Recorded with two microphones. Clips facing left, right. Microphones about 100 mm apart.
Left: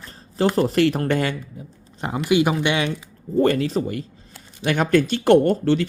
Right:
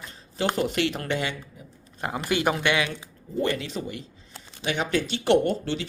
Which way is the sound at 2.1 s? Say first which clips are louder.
Left 7 dB; 10° left (ahead or behind).